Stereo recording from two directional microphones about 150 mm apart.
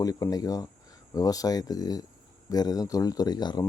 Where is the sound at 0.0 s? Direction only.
25° left (ahead or behind).